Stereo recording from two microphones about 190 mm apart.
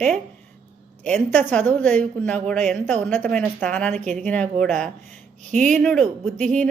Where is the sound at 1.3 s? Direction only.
10° left (ahead or behind).